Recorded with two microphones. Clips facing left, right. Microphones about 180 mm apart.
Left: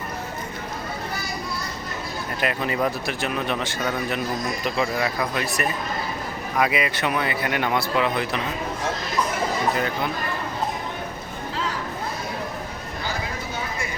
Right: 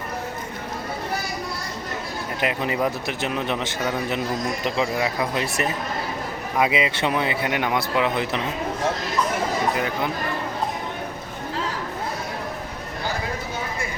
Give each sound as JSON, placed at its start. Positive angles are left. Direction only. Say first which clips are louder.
{"t": 2.4, "sound": "speech", "louder": "right 1 dB", "side_deg": -20}
{"t": 9.7, "sound": "speech", "louder": "even", "side_deg": -15}